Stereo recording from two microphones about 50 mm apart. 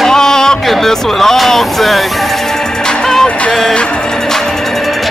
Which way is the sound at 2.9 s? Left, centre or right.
Centre.